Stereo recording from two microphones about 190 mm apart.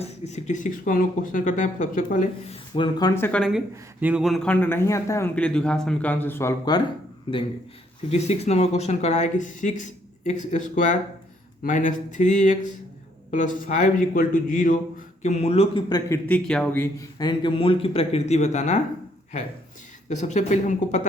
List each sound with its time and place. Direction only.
0.0 s speech: 35° left (ahead or behind)
2.7 s a man's voice: 25° left (ahead or behind)
8.1 s speech: 35° left (ahead or behind)
20.1 s speech: 40° left (ahead or behind)